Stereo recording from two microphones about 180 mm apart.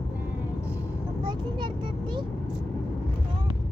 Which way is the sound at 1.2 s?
25° right (ahead or behind).